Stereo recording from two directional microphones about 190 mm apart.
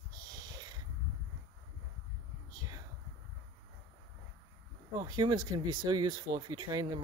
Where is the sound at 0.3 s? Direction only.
20° right (ahead or behind).